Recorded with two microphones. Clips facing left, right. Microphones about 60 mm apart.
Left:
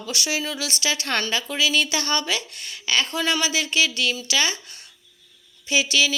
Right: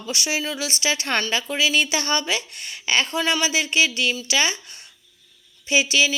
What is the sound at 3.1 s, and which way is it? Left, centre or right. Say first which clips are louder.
A woman's voice: right 1 dB; centre.